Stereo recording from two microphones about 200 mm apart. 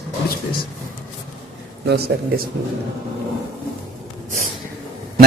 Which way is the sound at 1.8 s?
55° right (ahead or behind).